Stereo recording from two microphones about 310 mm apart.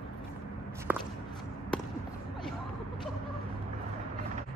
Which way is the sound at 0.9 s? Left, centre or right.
Centre.